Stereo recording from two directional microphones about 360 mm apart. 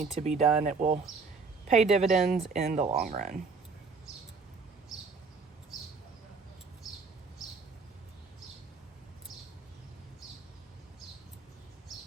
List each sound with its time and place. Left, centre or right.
0.0 s speech: centre